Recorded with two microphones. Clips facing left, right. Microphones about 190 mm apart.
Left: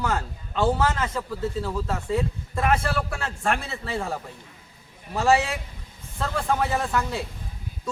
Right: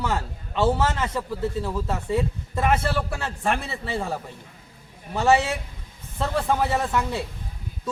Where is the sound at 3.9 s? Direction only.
Centre (ahead or behind).